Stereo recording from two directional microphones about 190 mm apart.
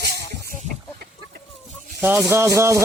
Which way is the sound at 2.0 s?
10° right (ahead or behind).